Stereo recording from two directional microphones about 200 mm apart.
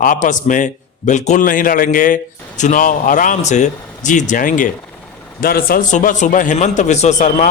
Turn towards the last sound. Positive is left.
turn(degrees=40)  # may be behind; listen again after turning